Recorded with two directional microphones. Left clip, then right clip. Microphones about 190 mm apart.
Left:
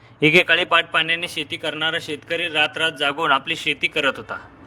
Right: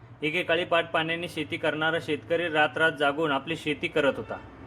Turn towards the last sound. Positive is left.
turn(degrees=50)  # may be behind; listen again after turning